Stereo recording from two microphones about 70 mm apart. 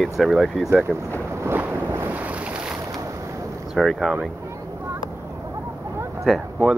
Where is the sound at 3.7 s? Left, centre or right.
Centre.